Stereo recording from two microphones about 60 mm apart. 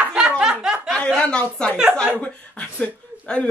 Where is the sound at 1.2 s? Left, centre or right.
Centre.